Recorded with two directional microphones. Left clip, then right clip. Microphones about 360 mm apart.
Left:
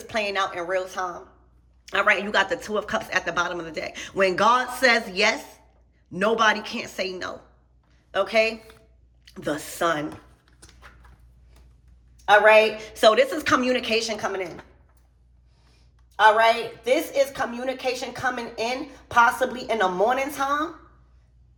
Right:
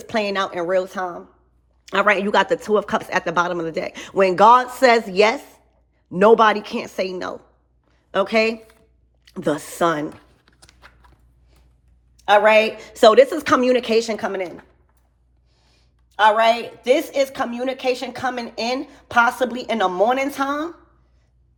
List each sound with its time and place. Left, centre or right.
0.0 s a woman's voice: centre
7.9 s a sound: centre
9.2 s tearing: centre
12.1 s a woman's voice: right
16.1 s a woman's voice: right